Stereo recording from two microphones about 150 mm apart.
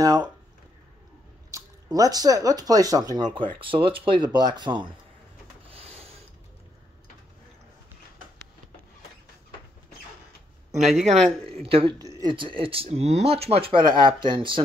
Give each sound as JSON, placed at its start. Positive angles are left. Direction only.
{"t": 0.0, "sound": "speech", "side_deg": -25}
{"t": 1.5, "sound": "speech", "side_deg": -25}
{"t": 5.7, "sound": "rub", "side_deg": -40}
{"t": 10.8, "sound": "speech", "side_deg": 0}
{"t": 11.6, "sound": "speech", "side_deg": -35}